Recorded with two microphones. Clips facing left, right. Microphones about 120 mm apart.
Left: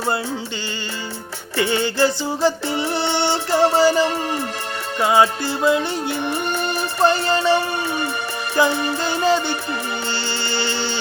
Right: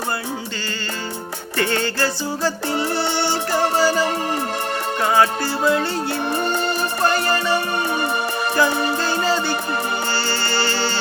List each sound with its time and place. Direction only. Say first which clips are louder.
1.5 s music: left 2 dB; 15° left (ahead or behind)